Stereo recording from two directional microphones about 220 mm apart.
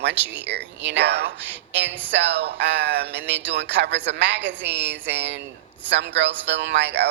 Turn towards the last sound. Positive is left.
turn(degrees=-50)  # may be behind; listen again after turning